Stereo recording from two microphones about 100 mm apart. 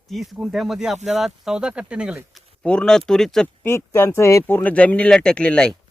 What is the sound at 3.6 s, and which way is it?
Speech, 25° left (ahead or behind).